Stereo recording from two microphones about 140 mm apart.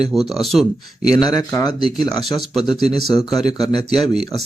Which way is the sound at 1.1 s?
25° left (ahead or behind).